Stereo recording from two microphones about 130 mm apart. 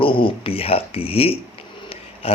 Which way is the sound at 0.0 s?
45° left (ahead or behind).